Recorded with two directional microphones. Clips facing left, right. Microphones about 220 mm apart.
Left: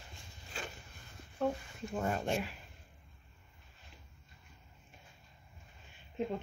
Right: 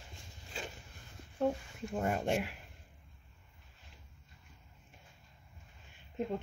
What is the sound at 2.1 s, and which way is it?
Speech, 15° right (ahead or behind).